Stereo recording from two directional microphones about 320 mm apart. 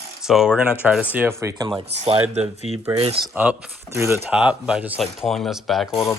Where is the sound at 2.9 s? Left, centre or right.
Centre.